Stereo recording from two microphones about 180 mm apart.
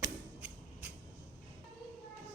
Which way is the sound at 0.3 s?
5° right (ahead or behind).